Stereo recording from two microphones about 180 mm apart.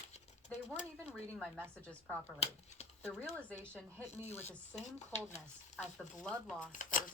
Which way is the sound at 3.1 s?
10° right (ahead or behind).